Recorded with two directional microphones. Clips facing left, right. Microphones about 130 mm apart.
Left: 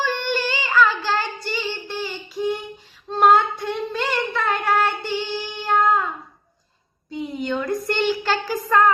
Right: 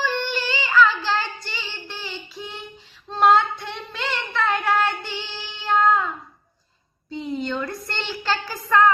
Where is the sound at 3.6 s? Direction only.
45° left (ahead or behind).